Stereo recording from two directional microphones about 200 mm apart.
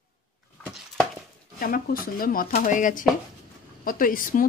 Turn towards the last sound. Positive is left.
turn(degrees=45)  # may be behind; listen again after turning